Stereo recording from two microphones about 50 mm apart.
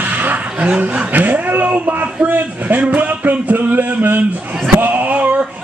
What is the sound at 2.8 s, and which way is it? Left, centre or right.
Speech, right.